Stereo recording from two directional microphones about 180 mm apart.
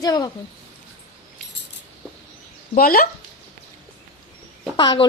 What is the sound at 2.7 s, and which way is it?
Speech, 55° left (ahead or behind).